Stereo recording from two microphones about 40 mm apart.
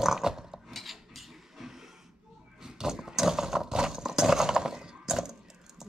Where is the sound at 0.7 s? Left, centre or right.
Centre.